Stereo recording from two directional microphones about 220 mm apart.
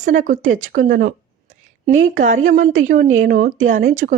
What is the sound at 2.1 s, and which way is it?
Speech, 35° right (ahead or behind).